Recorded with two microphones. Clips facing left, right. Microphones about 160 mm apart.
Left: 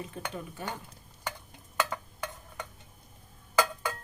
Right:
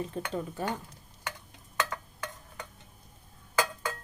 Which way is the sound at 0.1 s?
35° right (ahead or behind).